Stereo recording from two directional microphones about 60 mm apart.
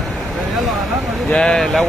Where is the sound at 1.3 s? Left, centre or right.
Centre.